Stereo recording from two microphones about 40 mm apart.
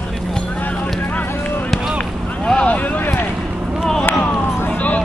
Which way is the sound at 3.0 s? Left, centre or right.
Left.